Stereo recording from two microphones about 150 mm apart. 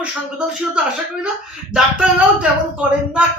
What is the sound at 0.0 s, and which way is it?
Speech, 5° right (ahead or behind).